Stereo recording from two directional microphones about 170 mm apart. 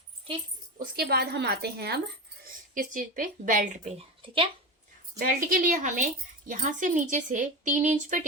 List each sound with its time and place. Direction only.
0.8 s a woman's voice: 65° right (ahead or behind)
2.4 s speech: 50° right (ahead or behind); by 4.4 s 35° right (ahead or behind)
5.2 s speech: 55° right (ahead or behind)